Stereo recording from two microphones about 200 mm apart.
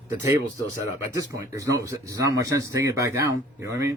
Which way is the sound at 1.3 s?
15° right (ahead or behind).